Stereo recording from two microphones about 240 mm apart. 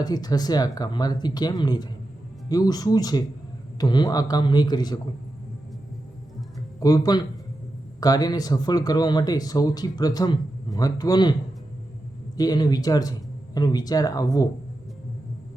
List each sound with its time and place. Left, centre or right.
0.0 s speech: centre
6.7 s speech: centre
12.4 s speech: centre